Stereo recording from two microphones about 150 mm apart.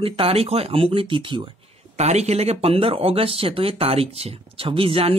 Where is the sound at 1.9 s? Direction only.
45° right (ahead or behind).